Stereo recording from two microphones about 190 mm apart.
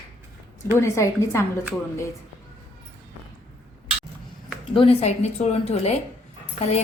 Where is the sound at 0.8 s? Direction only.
15° left (ahead or behind).